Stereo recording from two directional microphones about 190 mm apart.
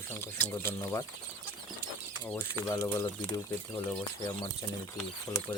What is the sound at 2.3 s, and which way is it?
Speech, 15° left (ahead or behind).